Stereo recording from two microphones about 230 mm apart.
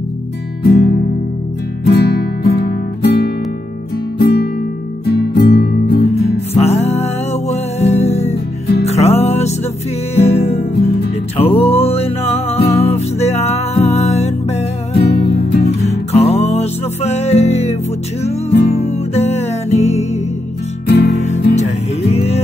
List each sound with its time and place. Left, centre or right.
0.7 s music: left
6.5 s music: left
15.0 s music: left
15.8 s music: left
18.5 s music: left
18.8 s music: left
21.5 s music: left